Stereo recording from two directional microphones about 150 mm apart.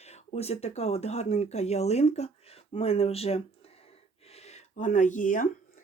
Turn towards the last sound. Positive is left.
turn(degrees=60)  # may be behind; listen again after turning